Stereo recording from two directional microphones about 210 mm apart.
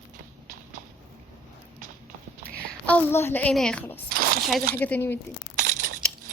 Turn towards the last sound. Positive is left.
turn(degrees=-40)  # may be behind; listen again after turning